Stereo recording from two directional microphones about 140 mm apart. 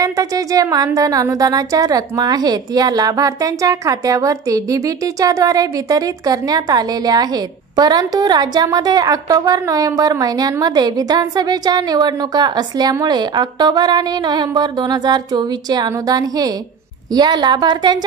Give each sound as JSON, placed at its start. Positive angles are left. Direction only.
{"t": 0.0, "sound": "a woman's voice", "side_deg": -25}